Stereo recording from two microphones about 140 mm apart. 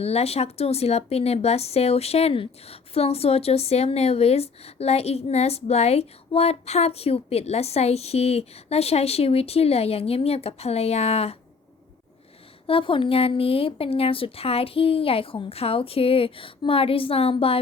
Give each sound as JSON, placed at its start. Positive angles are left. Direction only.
{"t": 0.0, "sound": "a woman's voice", "side_deg": 45}
{"t": 12.6, "sound": "speech", "side_deg": 40}